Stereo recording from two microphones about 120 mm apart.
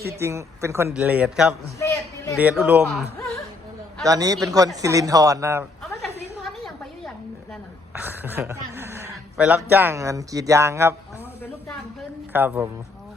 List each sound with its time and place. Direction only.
0.1 s speech: 25° right (ahead or behind)
0.9 s a man's voice: 10° right (ahead or behind)
1.8 s a sound: 20° left (ahead or behind)
2.4 s a man's voice: 15° right (ahead or behind)
4.0 s speech: 30° right (ahead or behind)
6.0 s a sound: centre (ahead or behind)
7.9 s speech: 15° right (ahead or behind)
9.4 s speech: 10° right (ahead or behind)
12.3 s a man's voice: 15° right (ahead or behind)